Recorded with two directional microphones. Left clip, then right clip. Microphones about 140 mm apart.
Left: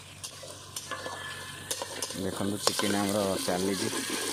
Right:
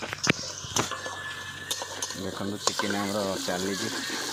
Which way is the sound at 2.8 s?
40° left (ahead or behind).